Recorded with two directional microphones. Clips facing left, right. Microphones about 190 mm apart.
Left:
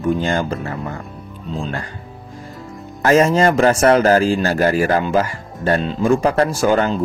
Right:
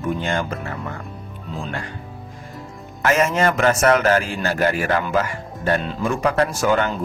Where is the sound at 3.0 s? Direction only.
35° left (ahead or behind).